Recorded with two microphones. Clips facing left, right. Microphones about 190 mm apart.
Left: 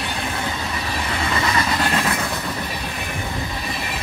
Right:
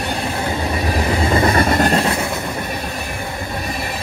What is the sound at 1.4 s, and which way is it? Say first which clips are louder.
Vehicle: right 6 dB; 50° right (ahead or behind).